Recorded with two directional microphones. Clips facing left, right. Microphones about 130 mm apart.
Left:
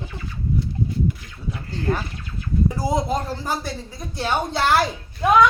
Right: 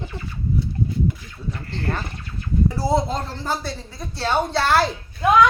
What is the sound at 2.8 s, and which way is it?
Speech, 15° left (ahead or behind).